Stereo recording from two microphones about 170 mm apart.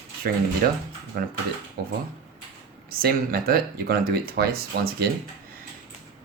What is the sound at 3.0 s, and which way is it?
Speech, 60° right (ahead or behind).